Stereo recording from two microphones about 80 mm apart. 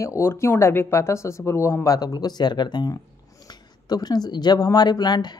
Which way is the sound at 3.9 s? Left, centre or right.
Left.